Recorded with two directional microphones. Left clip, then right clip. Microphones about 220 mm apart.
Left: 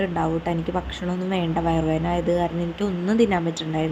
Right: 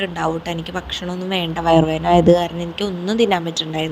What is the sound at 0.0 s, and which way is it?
A woman's voice, 30° right (ahead or behind).